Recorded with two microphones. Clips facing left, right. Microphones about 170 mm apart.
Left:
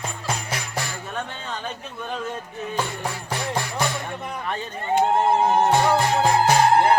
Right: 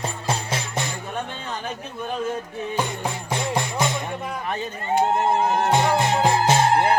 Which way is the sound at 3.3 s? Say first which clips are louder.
Right 3 dB; 20° right (ahead or behind).